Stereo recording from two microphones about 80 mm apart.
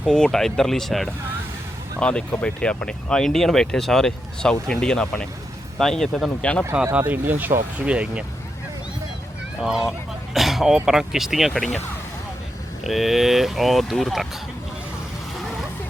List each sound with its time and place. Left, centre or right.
0.0 s speech: centre
2.0 s speech: centre
6.4 s speech: centre
7.1 s speech: right
9.6 s speech: centre
11.5 s speech: centre
12.8 s speech: centre